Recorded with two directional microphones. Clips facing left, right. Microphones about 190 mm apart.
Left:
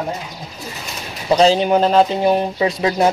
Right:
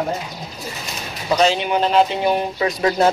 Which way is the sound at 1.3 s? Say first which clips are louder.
Left 4 dB; 35° left (ahead or behind).